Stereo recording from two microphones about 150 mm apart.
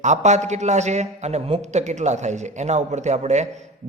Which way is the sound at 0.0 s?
50° right (ahead or behind).